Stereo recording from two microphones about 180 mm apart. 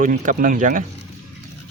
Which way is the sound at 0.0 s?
45° right (ahead or behind).